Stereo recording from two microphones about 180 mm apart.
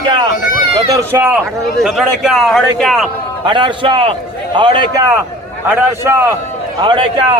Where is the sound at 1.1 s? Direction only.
10° right (ahead or behind).